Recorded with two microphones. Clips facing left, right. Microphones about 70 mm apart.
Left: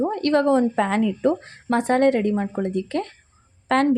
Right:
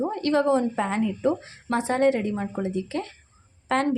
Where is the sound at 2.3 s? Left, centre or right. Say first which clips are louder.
Left 5 dB; left.